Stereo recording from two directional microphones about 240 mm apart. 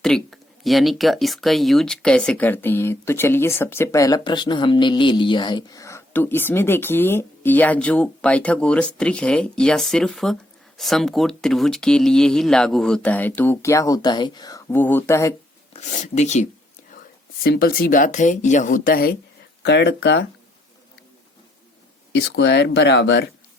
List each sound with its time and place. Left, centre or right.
0.0 s speech: centre
15.7 s speech: left
17.4 s speech: left
22.1 s speech: left